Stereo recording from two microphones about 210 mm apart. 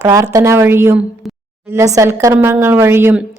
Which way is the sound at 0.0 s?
15° right (ahead or behind).